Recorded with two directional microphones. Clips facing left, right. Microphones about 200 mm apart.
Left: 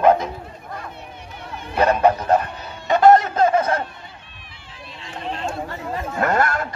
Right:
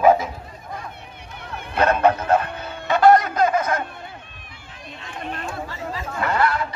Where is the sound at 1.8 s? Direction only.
10° left (ahead or behind); by 3.8 s 30° left (ahead or behind).